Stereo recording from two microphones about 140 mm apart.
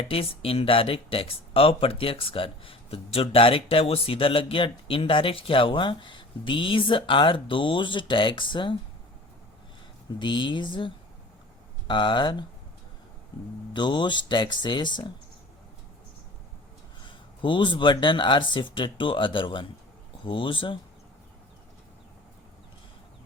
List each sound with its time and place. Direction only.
0.0 s speech: 45° left (ahead or behind)
10.1 s speech: 35° left (ahead or behind)
13.7 s speech: 35° left (ahead or behind)
17.1 s speech: 35° left (ahead or behind)